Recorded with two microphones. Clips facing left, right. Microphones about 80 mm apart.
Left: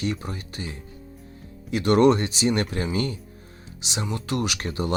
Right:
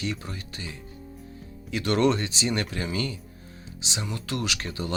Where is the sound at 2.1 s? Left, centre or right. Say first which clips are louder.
Left 5 dB; left.